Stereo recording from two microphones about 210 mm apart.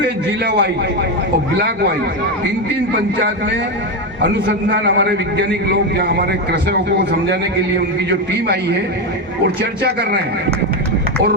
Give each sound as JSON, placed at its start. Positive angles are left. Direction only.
{"t": 0.4, "sound": "speech", "side_deg": -50}
{"t": 4.2, "sound": "a man's voice", "side_deg": -55}
{"t": 9.6, "sound": "speech", "side_deg": -50}